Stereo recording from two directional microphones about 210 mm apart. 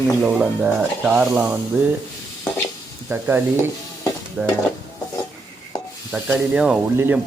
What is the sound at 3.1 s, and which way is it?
Speech, 10° right (ahead or behind).